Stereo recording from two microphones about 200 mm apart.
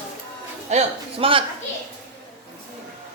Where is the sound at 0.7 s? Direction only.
30° right (ahead or behind).